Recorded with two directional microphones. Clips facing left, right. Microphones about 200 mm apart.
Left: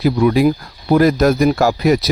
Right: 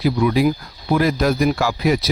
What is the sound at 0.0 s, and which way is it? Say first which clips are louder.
Speech: left 4 dB; 45° left (ahead or behind).